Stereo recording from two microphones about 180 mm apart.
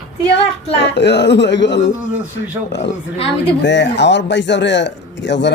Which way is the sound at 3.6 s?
80° left.